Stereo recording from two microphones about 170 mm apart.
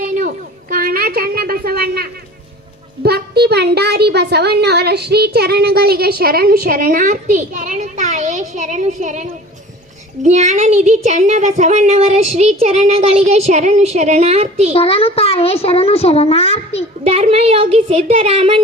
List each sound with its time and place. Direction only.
0.0 s a sound: 50° right (ahead or behind); by 2.0 s 65° right (ahead or behind)
3.0 s speech: 75° right (ahead or behind); by 9.2 s 45° right (ahead or behind)
10.2 s speech: 40° right (ahead or behind)
14.7 s a child's voice: 35° left (ahead or behind)
17.0 s speech: 35° right (ahead or behind)